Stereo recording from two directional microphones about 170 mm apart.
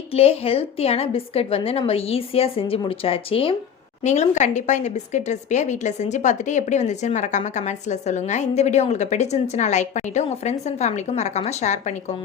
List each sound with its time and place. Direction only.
0.1 s a woman's voice: 35° left (ahead or behind)